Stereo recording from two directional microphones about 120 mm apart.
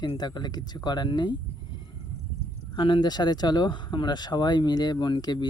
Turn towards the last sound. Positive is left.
turn(degrees=35)  # may be behind; listen again after turning